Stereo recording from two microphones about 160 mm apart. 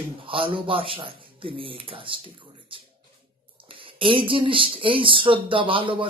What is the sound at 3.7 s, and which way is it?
A man's voice, 35° right (ahead or behind).